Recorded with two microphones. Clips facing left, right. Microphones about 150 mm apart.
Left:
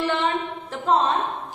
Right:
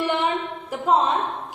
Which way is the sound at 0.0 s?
15° right (ahead or behind).